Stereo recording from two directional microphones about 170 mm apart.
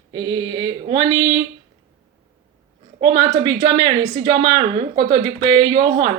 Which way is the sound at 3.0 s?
30° right (ahead or behind).